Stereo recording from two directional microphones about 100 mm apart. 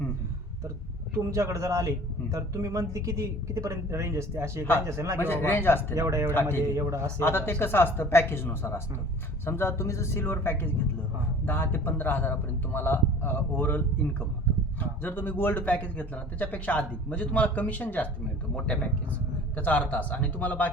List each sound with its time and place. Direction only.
1.1 s speech: 35° right (ahead or behind)
5.2 s a man's voice: 20° left (ahead or behind)
5.9 s speech: 30° right (ahead or behind)
7.2 s a man's voice: 20° left (ahead or behind)